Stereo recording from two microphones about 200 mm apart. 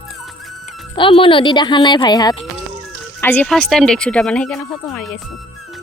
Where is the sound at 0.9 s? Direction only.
25° left (ahead or behind).